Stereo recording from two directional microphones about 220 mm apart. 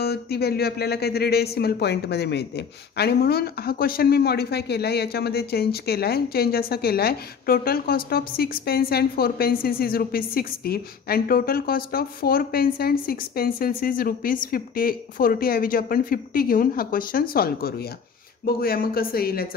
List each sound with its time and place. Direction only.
0.0 s speech: 45° left (ahead or behind)